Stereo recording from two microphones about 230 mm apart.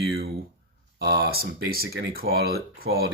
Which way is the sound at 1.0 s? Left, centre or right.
Right.